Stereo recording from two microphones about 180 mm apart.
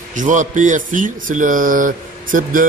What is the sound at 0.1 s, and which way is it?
A man's voice, 45° right (ahead or behind).